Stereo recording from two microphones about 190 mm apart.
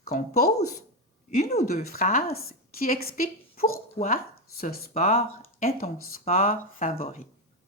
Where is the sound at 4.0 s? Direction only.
20° left (ahead or behind).